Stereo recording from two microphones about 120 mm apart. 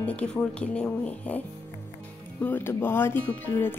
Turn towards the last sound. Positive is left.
turn(degrees=15)  # may be behind; listen again after turning